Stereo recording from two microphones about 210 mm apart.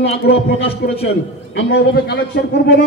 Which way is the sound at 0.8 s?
50° left (ahead or behind).